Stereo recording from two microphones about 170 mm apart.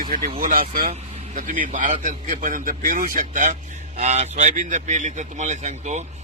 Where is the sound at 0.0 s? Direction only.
55° right (ahead or behind).